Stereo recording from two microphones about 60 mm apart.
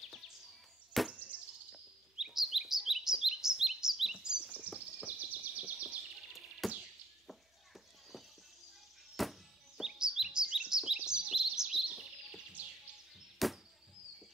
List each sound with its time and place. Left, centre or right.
1.0 s insect: centre
1.3 s bird vocalization: right
1.7 s chirp: centre
4.6 s bird vocalization: centre
5.9 s music: centre
9.1 s chirp: centre
12.6 s music: right
13.4 s insect: centre